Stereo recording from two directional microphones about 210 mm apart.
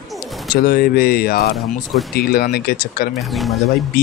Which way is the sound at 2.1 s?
45° left (ahead or behind).